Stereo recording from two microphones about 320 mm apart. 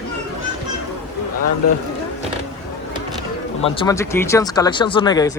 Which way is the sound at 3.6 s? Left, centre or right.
Centre.